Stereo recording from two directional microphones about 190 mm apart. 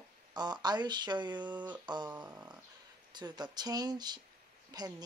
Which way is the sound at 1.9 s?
25° right (ahead or behind).